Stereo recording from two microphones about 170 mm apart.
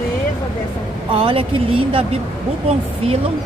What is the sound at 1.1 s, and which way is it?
Speech, 30° right (ahead or behind).